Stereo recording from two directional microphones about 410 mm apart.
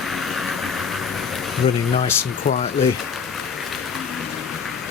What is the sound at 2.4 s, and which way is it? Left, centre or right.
Speech, centre.